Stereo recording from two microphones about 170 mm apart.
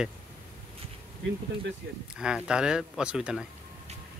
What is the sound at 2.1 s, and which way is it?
Speech, 5° right (ahead or behind).